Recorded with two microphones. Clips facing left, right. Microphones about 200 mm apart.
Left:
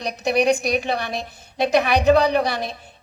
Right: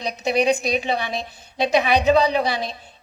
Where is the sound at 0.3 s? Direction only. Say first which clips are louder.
Left 1 dB; 60° left (ahead or behind).